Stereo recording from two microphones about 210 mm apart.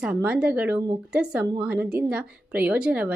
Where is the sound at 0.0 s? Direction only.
5° right (ahead or behind).